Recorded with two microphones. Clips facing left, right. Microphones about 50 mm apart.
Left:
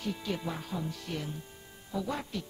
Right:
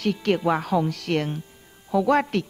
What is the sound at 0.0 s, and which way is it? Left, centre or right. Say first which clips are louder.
Speech: right 13 dB; right.